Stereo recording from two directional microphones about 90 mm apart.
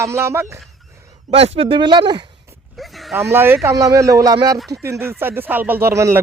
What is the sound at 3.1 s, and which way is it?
Speech, 30° right (ahead or behind).